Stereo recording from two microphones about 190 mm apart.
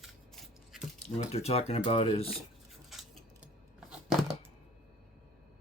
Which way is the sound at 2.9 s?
5° right (ahead or behind).